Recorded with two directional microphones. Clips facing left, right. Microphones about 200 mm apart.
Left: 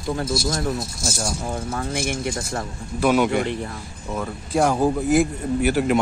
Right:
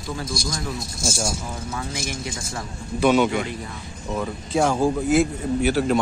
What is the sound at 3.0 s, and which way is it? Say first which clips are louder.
Speech: right 1 dB; 5° left (ahead or behind).